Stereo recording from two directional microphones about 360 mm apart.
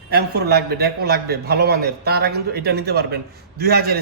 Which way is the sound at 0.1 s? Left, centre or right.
Right.